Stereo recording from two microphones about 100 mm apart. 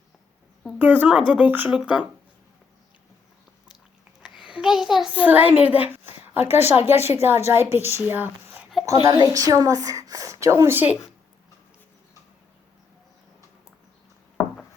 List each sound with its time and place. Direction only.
0.8 s speech: 15° right (ahead or behind)
4.2 s a sound: 50° left (ahead or behind)
4.4 s a child's voice: 5° right (ahead or behind)
5.1 s a woman's voice: 15° right (ahead or behind)
8.9 s a woman's voice: 40° right (ahead or behind); by 10.9 s 20° right (ahead or behind)